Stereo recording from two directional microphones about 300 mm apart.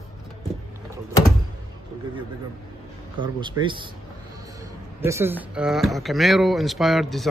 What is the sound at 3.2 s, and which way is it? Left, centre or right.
Speech, centre.